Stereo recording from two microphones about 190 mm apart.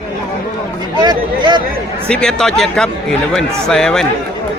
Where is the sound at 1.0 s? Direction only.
20° right (ahead or behind).